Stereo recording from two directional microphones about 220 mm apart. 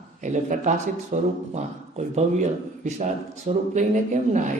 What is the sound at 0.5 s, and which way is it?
A man's voice, 35° right (ahead or behind).